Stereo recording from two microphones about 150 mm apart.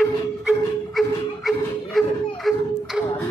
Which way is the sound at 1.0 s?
Centre (ahead or behind).